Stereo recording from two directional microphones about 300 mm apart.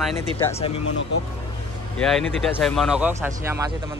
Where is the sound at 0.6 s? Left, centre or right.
Centre.